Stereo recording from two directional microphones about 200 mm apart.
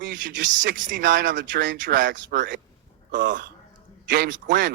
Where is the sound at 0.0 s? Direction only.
40° right (ahead or behind).